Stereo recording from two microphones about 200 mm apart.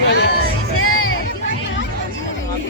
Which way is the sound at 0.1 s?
55° left (ahead or behind).